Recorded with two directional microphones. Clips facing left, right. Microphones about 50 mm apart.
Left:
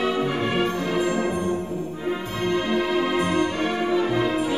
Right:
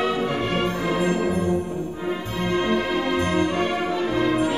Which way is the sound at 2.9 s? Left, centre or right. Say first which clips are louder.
Even; centre.